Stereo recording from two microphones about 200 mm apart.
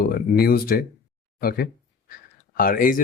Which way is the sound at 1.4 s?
50° left (ahead or behind).